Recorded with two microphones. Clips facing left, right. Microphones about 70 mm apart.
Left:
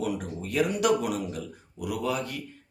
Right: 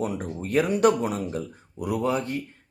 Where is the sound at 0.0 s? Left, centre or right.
Right.